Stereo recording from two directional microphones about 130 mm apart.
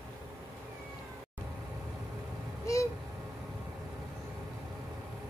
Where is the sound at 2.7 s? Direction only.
25° left (ahead or behind).